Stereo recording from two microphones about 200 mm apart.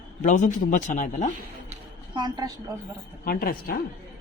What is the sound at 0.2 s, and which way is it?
Speech, 40° left (ahead or behind).